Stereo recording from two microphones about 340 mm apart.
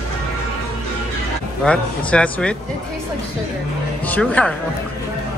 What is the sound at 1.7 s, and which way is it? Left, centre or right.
Speech, centre.